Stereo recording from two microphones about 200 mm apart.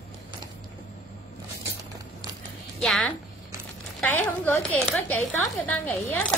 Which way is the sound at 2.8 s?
Centre (ahead or behind).